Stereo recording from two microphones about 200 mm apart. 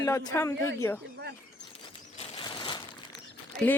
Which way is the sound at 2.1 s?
25° left (ahead or behind).